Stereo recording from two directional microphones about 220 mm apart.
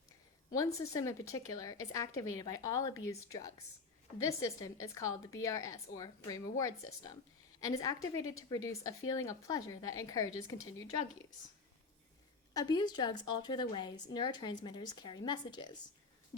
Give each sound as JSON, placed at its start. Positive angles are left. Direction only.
{"t": 0.5, "sound": "speech", "side_deg": 15}
{"t": 7.6, "sound": "speech", "side_deg": 15}
{"t": 12.5, "sound": "a woman's voice", "side_deg": 20}